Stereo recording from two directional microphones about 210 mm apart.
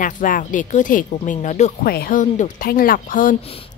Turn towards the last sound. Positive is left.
turn(degrees=40)  # may be behind; listen again after turning